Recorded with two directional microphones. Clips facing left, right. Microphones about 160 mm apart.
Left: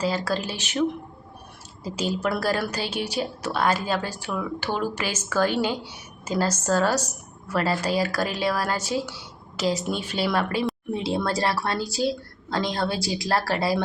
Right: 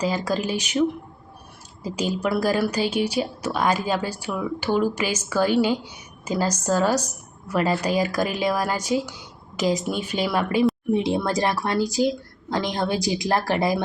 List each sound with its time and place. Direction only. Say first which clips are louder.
0.0 s a woman's voice: right 2 dB; 15° right (ahead or behind)